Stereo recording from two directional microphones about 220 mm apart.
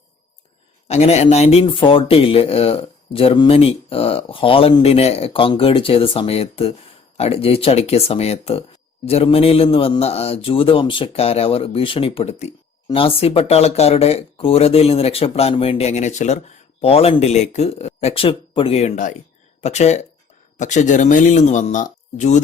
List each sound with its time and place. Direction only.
0.9 s a man's voice: 30° left (ahead or behind)